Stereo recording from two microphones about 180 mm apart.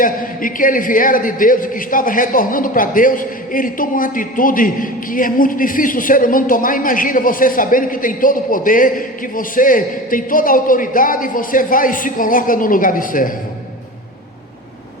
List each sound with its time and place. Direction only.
0.0 s a man's voice: 50° left (ahead or behind)